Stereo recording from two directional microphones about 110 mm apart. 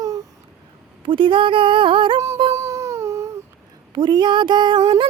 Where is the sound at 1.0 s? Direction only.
50° right (ahead or behind).